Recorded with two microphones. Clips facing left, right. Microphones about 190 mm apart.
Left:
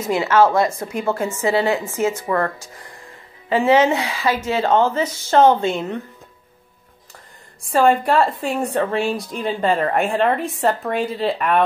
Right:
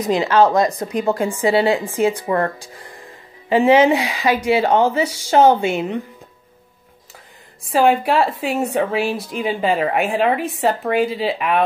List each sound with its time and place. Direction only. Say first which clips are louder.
0.0 s speech: right 1 dB; 15° right (ahead or behind)
2.1 s speech: right 1 dB; 25° right (ahead or behind)
3.4 s speech: right 2 dB; 15° right (ahead or behind)
7.6 s a woman's voice: even; centre (ahead or behind)